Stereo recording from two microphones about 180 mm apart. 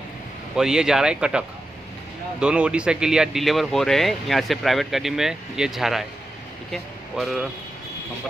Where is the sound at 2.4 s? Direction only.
5° right (ahead or behind).